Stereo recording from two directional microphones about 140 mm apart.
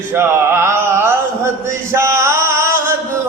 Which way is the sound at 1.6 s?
20° right (ahead or behind).